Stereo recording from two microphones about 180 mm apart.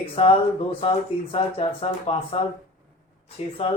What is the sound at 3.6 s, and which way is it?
Speech, 35° left (ahead or behind).